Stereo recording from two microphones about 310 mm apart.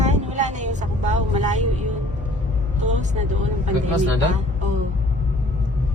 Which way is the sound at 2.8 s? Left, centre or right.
Right.